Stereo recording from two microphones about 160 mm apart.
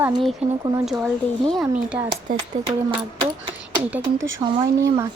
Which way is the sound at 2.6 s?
35° right (ahead or behind).